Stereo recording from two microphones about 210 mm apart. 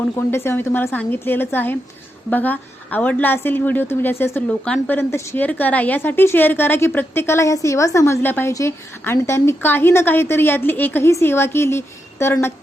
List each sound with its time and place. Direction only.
0.3 s a woman's voice: 10° left (ahead or behind)